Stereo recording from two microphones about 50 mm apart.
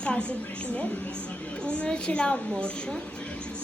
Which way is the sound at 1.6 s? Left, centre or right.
Left.